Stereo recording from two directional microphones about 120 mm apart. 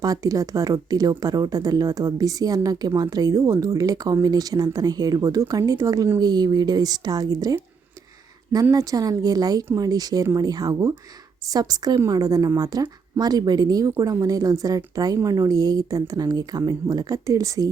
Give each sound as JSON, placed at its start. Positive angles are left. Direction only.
{"t": 0.0, "sound": "speech", "side_deg": -30}
{"t": 8.7, "sound": "a woman's voice", "side_deg": -30}